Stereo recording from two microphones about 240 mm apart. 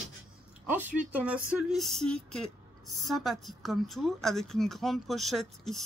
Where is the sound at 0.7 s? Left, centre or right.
Centre.